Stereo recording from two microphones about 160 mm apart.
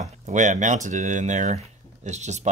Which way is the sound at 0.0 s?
50° right (ahead or behind).